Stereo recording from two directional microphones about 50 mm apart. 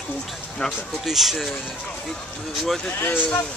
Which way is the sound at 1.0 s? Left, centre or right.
Centre.